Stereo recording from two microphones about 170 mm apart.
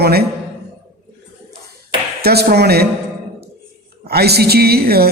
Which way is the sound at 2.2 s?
70° right (ahead or behind).